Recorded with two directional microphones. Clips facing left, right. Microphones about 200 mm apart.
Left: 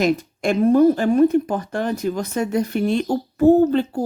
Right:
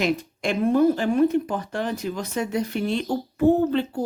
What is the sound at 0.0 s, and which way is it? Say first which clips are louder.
Speech: left 5 dB; 45° left (ahead or behind).